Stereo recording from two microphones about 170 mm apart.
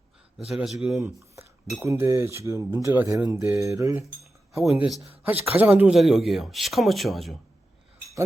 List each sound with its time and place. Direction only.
0.3 s speech: centre (ahead or behind)
1.8 s speech: 15° right (ahead or behind)
4.6 s speech: centre (ahead or behind)
5.2 s speech: 10° right (ahead or behind)